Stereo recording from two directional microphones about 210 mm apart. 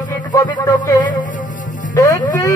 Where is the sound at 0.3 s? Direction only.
15° left (ahead or behind).